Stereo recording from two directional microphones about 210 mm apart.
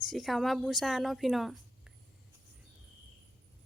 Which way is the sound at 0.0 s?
Centre (ahead or behind).